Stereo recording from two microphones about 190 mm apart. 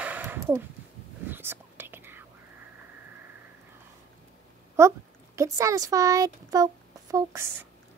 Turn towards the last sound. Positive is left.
turn(degrees=-15)  # may be behind; listen again after turning